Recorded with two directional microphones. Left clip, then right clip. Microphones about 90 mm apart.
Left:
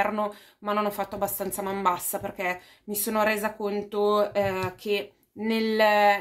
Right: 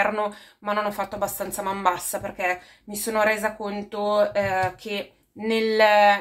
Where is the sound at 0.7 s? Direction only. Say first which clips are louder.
Right 2 dB; 25° left (ahead or behind).